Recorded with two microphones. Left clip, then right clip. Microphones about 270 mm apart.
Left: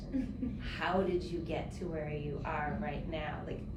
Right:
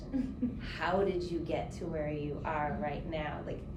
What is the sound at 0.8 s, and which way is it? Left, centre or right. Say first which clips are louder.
Speech: right 2 dB; right.